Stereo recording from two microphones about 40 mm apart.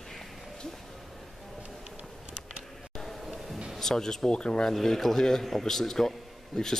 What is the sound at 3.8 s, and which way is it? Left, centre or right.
Speech, centre.